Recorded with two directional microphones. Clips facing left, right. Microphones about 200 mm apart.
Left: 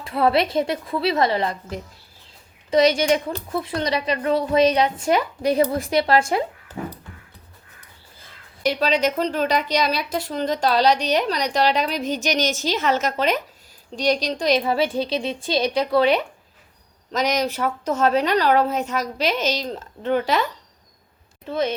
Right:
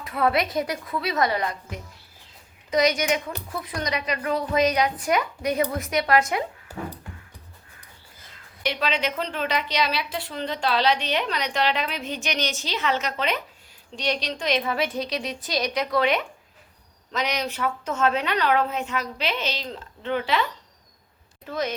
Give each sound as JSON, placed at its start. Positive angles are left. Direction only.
{"t": 0.0, "sound": "a woman's voice", "side_deg": 30}
{"t": 6.7, "sound": "music", "side_deg": -10}
{"t": 8.6, "sound": "a woman's voice", "side_deg": 40}
{"t": 17.1, "sound": "a woman's voice", "side_deg": 40}
{"t": 21.4, "sound": "speech", "side_deg": 30}